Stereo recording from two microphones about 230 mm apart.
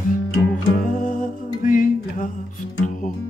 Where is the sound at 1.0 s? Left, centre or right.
Left.